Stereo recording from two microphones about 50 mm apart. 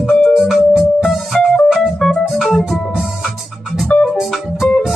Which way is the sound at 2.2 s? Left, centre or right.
Centre.